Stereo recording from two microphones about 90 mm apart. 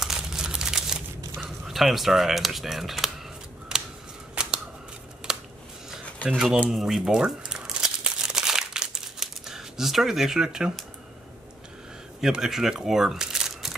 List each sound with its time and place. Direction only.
0.0 s a sound: 5° right (ahead or behind)
1.4 s speech: centre (ahead or behind)
4.4 s scissors: 10° right (ahead or behind)
5.3 s a sound: 5° right (ahead or behind)
6.3 s speech: 5° right (ahead or behind)
6.7 s crumpling: 5° right (ahead or behind)
12.2 s speech: 5° right (ahead or behind)